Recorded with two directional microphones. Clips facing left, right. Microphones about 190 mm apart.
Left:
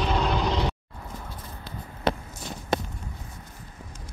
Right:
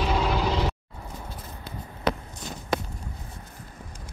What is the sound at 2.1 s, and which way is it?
Walk, 25° left (ahead or behind).